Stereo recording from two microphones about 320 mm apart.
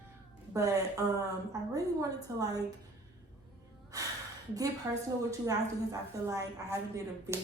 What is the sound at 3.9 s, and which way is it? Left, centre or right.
A woman's voice, centre.